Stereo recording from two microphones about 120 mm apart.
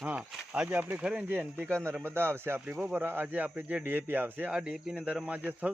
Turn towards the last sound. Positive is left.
turn(degrees=-10)  # may be behind; listen again after turning